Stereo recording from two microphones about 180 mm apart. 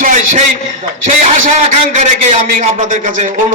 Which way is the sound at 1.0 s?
45° right (ahead or behind).